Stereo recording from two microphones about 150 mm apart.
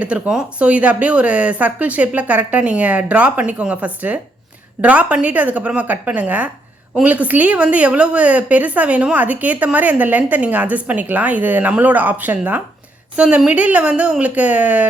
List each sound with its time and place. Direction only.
0.0 s a woman's voice: 5° right (ahead or behind)